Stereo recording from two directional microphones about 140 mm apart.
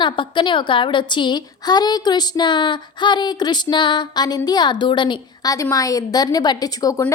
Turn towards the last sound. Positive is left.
turn(degrees=25)  # may be behind; listen again after turning